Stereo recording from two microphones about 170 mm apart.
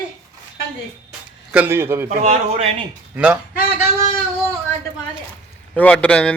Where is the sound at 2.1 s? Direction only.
50° right (ahead or behind).